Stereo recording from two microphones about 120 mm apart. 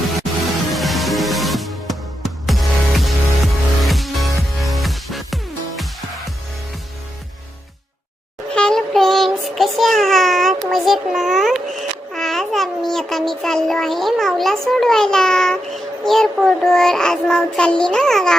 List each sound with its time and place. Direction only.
0.7 s music: centre (ahead or behind)
8.5 s child singing: 5° left (ahead or behind)
10.7 s babbling: centre (ahead or behind)